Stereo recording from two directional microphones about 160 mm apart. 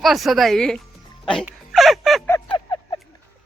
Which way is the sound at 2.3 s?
15° left (ahead or behind).